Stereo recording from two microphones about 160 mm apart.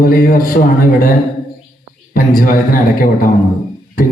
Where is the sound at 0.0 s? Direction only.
65° left (ahead or behind).